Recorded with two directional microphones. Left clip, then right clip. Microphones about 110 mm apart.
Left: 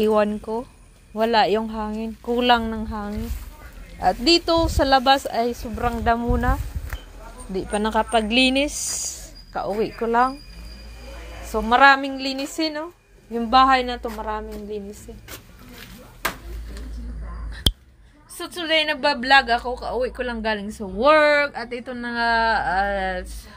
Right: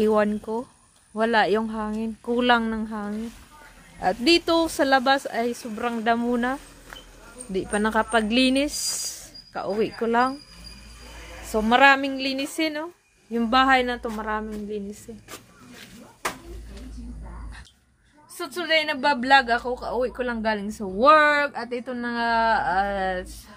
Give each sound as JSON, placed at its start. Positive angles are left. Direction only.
{"t": 0.0, "sound": "speech", "side_deg": -15}
{"t": 5.0, "sound": "speech", "side_deg": 0}
{"t": 6.2, "sound": "a woman's voice", "side_deg": -35}
{"t": 7.5, "sound": "speech", "side_deg": -20}
{"t": 9.9, "sound": "a woman's voice", "side_deg": -30}
{"t": 11.4, "sound": "a woman's voice", "side_deg": -40}
{"t": 18.4, "sound": "speech", "side_deg": -15}